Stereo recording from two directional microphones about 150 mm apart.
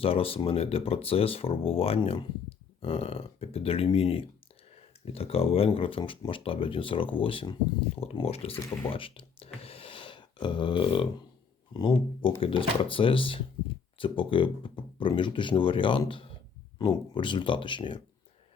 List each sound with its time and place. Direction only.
0.0 s speech: 40° left (ahead or behind)
9.6 s a sound: 40° left (ahead or behind)
11.7 s speech: 30° left (ahead or behind)